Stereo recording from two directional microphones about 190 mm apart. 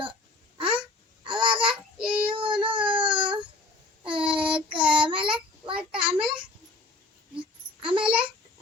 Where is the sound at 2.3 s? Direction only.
25° right (ahead or behind).